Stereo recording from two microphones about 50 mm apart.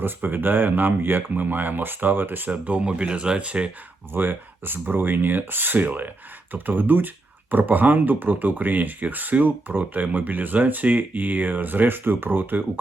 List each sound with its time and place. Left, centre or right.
0.0 s speech: right
4.1 s speech: right